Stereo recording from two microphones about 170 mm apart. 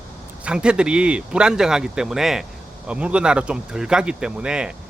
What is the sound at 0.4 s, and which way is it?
Speech, 5° right (ahead or behind).